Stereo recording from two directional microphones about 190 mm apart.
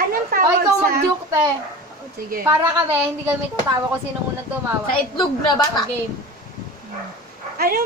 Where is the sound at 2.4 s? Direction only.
10° right (ahead or behind).